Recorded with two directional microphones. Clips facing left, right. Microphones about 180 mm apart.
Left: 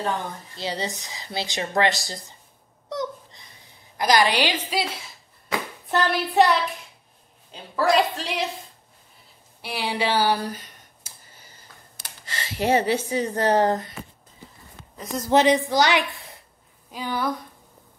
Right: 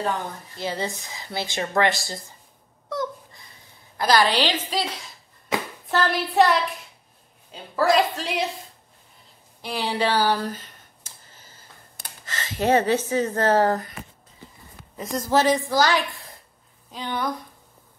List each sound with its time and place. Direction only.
0.6 s speech: 20° left (ahead or behind)
2.9 s babbling: 20° left (ahead or behind)
3.9 s speech: 15° left (ahead or behind)
5.5 s hands: 20° right (ahead or behind)
5.9 s hands: centre (ahead or behind)
7.5 s a woman's voice: centre (ahead or behind)
9.6 s a sound: 10° left (ahead or behind)
12.4 s speech: 10° left (ahead or behind)
15.2 s speech: 20° left (ahead or behind)